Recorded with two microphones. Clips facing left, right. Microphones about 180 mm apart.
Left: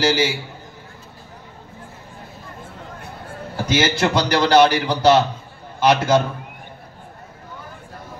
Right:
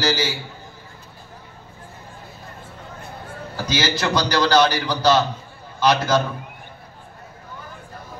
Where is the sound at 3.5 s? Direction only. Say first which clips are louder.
Left 4 dB; 25° left (ahead or behind).